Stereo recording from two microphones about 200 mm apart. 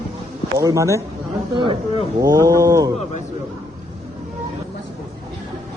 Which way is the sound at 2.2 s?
15° right (ahead or behind).